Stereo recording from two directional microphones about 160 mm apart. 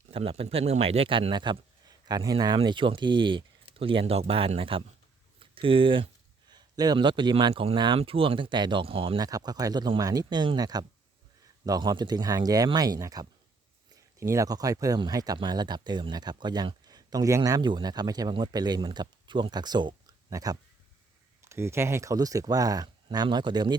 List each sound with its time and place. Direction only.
0.1 s speech: 35° right (ahead or behind)
9.2 s speech: 25° right (ahead or behind)